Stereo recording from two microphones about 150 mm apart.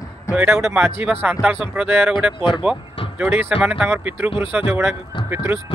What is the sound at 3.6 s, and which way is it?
Speech, 10° right (ahead or behind).